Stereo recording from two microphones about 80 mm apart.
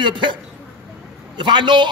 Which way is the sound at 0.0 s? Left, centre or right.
Right.